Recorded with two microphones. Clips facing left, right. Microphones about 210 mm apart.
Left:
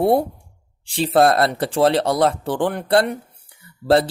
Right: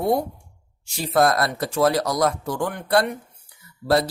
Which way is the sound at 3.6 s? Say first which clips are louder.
Left 4 dB; 30° left (ahead or behind).